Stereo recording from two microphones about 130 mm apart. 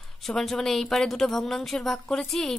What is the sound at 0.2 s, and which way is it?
Speech, centre (ahead or behind).